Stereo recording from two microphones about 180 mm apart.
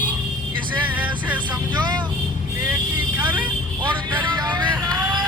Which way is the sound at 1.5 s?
25° right (ahead or behind).